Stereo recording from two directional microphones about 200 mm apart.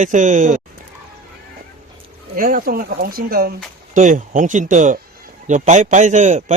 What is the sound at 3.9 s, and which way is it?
A man's voice, 40° right (ahead or behind).